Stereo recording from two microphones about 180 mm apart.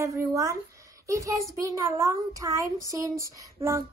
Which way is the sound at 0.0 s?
15° right (ahead or behind).